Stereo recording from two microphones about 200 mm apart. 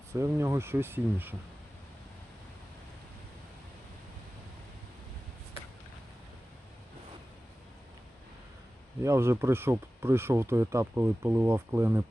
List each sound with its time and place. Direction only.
0.1 s speech: 15° right (ahead or behind)
9.0 s speech: 15° right (ahead or behind)